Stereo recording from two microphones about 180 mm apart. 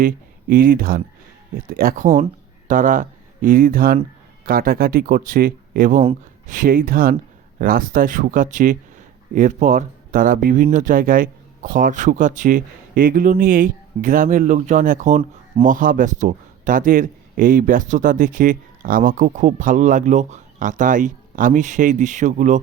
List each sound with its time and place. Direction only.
0.0 s a man's voice: 50° right (ahead or behind)